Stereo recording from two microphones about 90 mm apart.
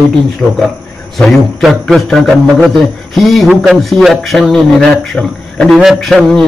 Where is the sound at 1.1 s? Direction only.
Centre (ahead or behind).